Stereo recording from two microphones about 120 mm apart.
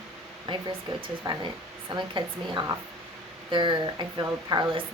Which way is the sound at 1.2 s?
40° right (ahead or behind).